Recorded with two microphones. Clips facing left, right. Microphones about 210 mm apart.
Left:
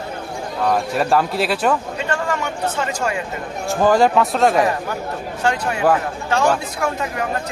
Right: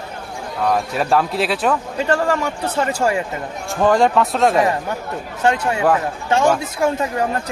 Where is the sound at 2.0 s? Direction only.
35° right (ahead or behind).